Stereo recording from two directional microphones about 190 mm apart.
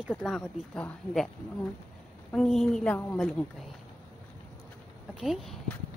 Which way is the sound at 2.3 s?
Centre (ahead or behind).